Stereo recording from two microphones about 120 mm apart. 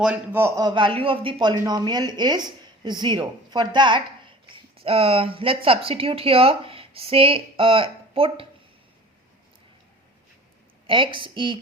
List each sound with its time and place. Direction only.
0.0 s a man's voice: 10° right (ahead or behind)
0.4 s speech: 30° right (ahead or behind)
0.7 s speech: 45° right (ahead or behind)
4.4 s speech: 55° right (ahead or behind)
10.8 s a woman's voice: 45° right (ahead or behind)